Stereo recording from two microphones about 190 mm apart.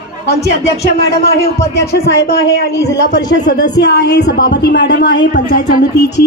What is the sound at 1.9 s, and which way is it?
A woman's voice, 60° left (ahead or behind).